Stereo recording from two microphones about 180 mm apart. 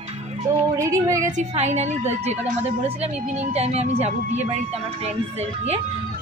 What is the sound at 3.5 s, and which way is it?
Speech, 35° right (ahead or behind).